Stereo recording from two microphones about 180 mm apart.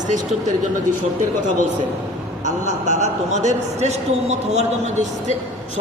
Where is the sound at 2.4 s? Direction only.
40° right (ahead or behind).